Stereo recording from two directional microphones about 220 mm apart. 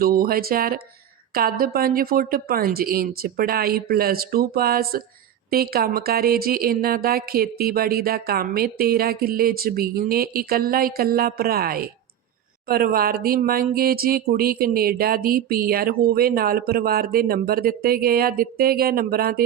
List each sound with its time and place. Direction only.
0.0 s speech: 40° right (ahead or behind)